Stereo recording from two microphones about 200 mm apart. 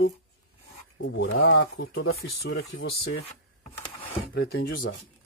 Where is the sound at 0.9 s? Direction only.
65° left (ahead or behind).